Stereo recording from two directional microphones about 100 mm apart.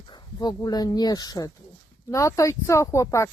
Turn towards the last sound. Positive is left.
turn(degrees=30)  # may be behind; listen again after turning